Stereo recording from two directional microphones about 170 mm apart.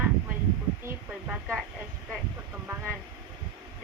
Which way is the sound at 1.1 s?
5° right (ahead or behind).